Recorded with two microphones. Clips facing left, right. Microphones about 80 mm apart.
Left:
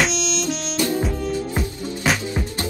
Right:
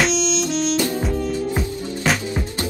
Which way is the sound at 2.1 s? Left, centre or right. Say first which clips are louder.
Right 1 dB; centre.